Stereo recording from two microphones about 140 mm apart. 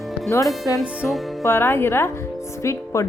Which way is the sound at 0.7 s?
Centre (ahead or behind).